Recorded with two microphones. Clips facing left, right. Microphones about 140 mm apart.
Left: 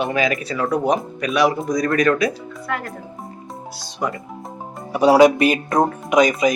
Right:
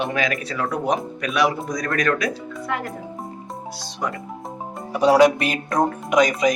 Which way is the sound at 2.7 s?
20° right (ahead or behind).